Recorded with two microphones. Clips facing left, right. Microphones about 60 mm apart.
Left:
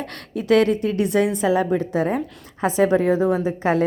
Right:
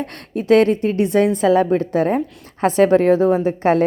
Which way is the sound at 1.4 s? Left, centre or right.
Right.